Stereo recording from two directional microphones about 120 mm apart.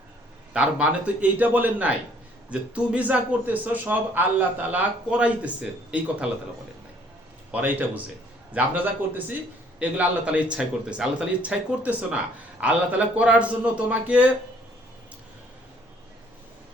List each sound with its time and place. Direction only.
0.5 s speech: 10° right (ahead or behind)
7.5 s speech: 15° right (ahead or behind)